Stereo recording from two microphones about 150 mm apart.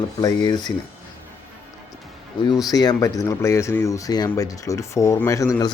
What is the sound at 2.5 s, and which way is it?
Speech, 25° left (ahead or behind).